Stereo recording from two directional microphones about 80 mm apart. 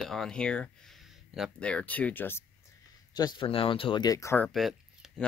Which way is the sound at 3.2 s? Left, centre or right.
Left.